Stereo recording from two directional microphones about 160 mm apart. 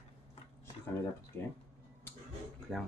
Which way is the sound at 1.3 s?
15° left (ahead or behind).